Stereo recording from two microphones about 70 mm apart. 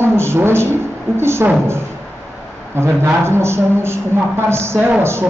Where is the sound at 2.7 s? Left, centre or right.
Right.